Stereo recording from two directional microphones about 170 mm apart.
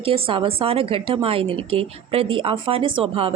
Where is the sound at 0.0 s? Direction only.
35° right (ahead or behind).